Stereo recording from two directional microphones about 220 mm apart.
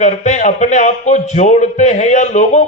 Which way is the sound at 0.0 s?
35° left (ahead or behind).